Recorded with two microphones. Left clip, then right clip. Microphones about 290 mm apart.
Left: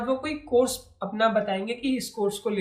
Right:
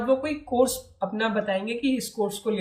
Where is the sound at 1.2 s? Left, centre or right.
Centre.